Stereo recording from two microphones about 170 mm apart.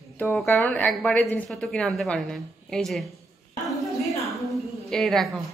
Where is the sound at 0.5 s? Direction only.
10° left (ahead or behind).